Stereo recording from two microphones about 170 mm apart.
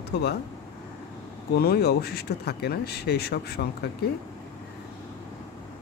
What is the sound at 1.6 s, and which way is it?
Speech, 70° left (ahead or behind).